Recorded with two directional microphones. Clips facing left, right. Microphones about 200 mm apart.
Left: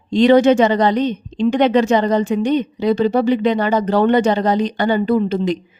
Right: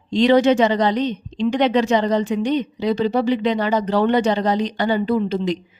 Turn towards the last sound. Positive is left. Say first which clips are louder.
# left 3 dB
turn(degrees=50)  # may be behind; listen again after turning